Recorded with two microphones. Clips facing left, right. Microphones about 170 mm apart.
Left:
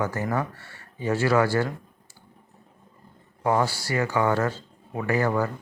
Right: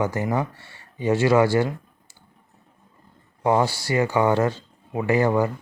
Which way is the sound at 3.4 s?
20° right (ahead or behind).